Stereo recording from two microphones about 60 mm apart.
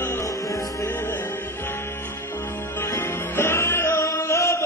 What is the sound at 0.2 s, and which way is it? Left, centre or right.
Music, left.